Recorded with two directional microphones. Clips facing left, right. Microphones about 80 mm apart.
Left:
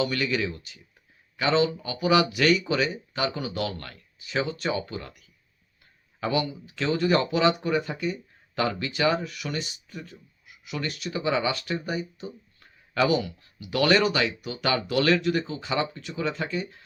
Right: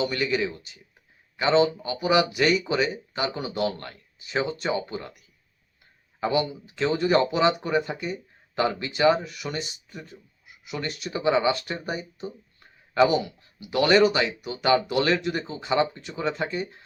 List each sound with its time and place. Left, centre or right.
0.0 s speech: right
6.1 s speech: right